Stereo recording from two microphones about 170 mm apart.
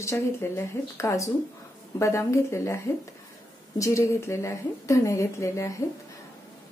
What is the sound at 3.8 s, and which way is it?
Speech, 15° left (ahead or behind).